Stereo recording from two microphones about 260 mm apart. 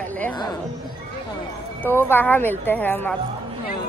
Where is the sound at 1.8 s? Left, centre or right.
Centre.